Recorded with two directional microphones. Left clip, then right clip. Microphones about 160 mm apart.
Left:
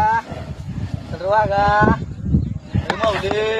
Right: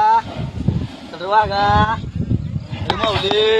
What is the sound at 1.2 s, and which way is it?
Speech, 35° left (ahead or behind).